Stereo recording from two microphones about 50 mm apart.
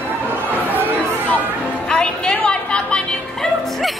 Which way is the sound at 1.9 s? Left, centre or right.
Centre.